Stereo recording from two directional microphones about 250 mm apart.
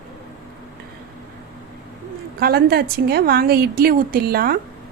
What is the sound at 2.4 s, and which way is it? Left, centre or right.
A woman's voice, right.